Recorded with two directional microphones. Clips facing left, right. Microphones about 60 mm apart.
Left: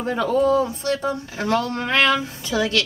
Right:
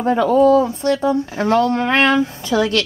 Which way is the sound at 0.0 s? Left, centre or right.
Right.